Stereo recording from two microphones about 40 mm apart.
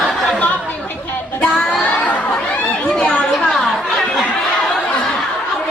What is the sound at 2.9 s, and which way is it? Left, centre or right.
Chatter, left.